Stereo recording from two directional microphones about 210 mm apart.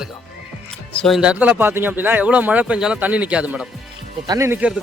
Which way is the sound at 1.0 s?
Centre (ahead or behind).